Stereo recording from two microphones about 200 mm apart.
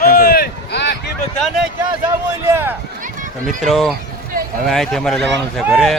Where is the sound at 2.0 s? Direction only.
15° right (ahead or behind).